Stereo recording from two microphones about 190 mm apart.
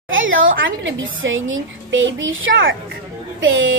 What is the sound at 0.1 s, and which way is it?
A woman's voice, 90° right.